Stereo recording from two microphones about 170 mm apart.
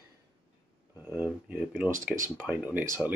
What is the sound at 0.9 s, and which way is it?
Speech, 10° right (ahead or behind).